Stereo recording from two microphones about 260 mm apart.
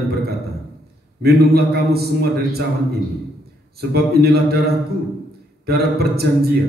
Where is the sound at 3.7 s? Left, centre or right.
Right.